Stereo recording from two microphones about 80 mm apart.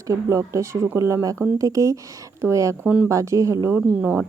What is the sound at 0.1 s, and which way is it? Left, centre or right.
Speech, right.